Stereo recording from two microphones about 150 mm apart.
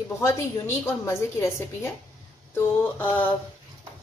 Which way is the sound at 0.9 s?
15° left (ahead or behind).